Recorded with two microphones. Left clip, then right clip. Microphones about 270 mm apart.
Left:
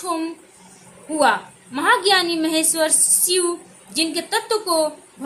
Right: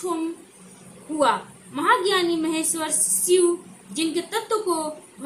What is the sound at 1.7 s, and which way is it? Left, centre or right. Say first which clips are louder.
A woman's voice: left 4 dB; left.